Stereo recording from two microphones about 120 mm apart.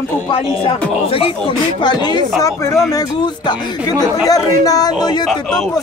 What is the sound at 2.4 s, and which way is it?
Speech, 25° left (ahead or behind).